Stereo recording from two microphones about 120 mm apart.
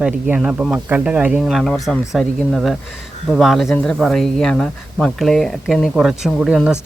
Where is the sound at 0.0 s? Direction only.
5° right (ahead or behind).